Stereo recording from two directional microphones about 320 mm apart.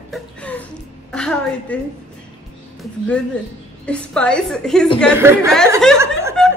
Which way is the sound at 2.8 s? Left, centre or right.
Centre.